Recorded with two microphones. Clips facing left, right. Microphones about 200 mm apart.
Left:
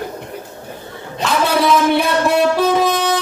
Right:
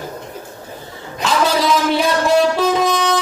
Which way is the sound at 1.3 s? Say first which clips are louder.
Left 1 dB; 60° left (ahead or behind).